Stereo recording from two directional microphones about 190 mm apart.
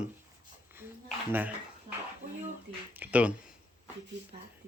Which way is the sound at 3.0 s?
5° right (ahead or behind).